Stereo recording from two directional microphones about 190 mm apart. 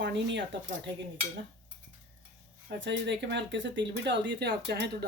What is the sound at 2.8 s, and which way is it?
Speech, 70° right (ahead or behind).